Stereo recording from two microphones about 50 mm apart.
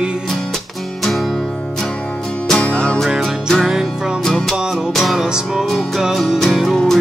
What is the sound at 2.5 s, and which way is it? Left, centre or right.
Music, left.